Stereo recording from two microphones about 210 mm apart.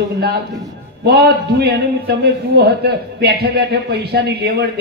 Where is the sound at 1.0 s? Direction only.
50° right (ahead or behind).